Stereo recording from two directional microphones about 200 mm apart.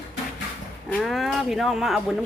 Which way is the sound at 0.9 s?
Centre (ahead or behind).